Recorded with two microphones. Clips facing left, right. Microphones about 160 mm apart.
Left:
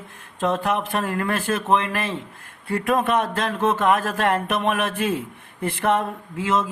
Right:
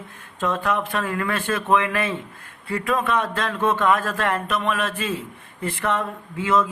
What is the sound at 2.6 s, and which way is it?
Speech, 50° left (ahead or behind).